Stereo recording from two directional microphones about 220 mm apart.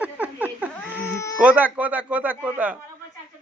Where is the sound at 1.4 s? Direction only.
5° right (ahead or behind).